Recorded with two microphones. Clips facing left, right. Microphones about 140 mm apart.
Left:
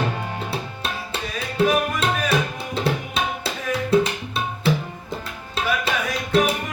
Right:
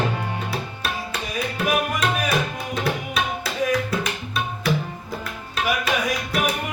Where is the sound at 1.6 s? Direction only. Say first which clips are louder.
Left 4 dB; 30° left (ahead or behind).